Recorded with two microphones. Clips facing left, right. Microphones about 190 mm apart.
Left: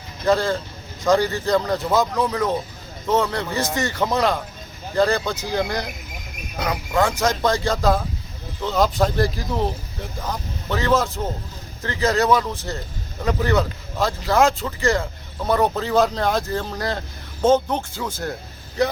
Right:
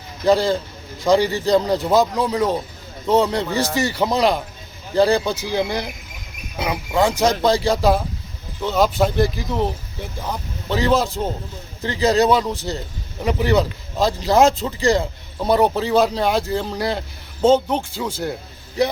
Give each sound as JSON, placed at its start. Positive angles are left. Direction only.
{"t": 0.3, "sound": "speech", "side_deg": -15}